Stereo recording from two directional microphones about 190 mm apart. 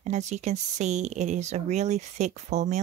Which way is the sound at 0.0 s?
35° right (ahead or behind).